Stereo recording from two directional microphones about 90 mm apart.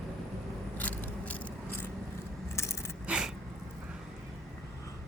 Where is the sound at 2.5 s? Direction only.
30° left (ahead or behind).